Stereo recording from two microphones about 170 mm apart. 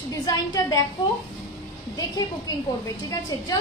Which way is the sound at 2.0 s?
20° left (ahead or behind).